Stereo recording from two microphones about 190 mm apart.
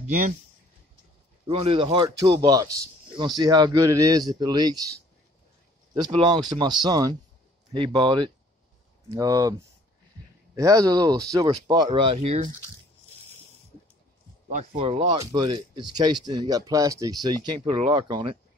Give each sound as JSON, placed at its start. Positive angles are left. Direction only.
{"t": 1.5, "sound": "speech", "side_deg": -30}
{"t": 6.1, "sound": "speech", "side_deg": -25}
{"t": 14.8, "sound": "speech", "side_deg": -30}